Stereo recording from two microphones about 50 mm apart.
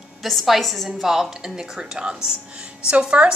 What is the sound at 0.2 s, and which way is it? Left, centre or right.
Speech, centre.